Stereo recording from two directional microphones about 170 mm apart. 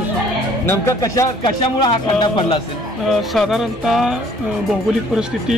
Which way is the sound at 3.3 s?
Centre (ahead or behind).